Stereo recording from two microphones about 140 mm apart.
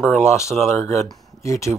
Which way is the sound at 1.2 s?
20° left (ahead or behind).